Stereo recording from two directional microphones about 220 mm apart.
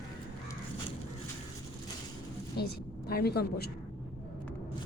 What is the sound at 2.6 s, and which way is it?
A woman's voice, 45° left (ahead or behind).